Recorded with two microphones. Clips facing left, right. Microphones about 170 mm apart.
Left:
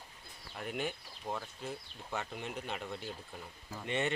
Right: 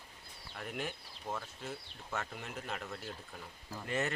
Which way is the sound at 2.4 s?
Centre (ahead or behind).